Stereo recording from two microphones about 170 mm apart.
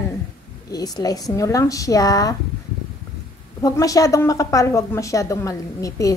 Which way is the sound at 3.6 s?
20° left (ahead or behind).